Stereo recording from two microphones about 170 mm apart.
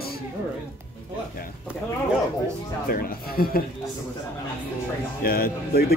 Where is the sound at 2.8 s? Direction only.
60° left (ahead or behind).